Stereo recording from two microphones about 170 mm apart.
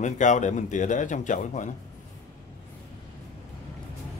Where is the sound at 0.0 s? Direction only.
45° left (ahead or behind).